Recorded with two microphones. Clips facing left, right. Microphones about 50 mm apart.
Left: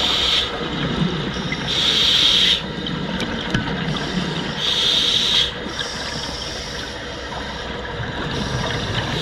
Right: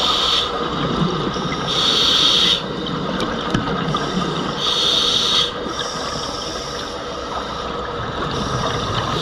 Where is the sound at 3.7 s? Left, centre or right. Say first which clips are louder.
Right 3 dB; left.